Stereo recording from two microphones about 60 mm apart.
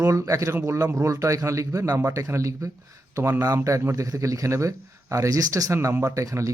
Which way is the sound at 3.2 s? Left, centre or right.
Right.